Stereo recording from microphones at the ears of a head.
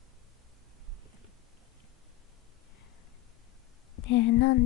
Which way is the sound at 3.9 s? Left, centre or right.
Left.